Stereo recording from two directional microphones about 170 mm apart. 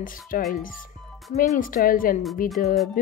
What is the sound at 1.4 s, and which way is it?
Speech, 55° left (ahead or behind).